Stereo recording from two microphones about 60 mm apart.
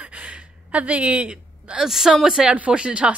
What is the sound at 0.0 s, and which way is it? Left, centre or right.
Gasp, right.